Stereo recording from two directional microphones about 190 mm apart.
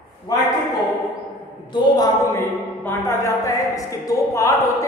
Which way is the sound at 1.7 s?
20° left (ahead or behind).